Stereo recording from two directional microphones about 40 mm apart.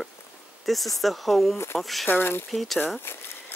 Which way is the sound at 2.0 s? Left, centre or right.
Left.